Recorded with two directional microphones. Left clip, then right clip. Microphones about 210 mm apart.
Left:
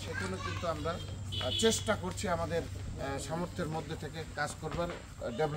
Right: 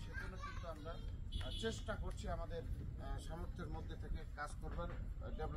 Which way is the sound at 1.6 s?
35° left (ahead or behind).